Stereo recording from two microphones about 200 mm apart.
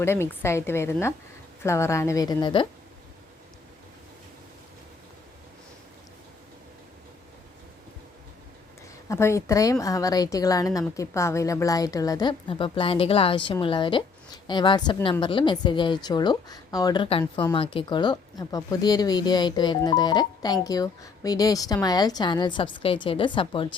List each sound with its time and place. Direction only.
0.0 s a woman's voice: 10° left (ahead or behind)
9.0 s a woman's voice: 15° left (ahead or behind)